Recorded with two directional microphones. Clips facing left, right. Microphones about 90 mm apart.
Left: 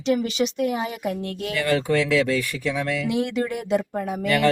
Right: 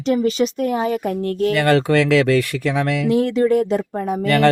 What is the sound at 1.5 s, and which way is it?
Speech, 70° right (ahead or behind).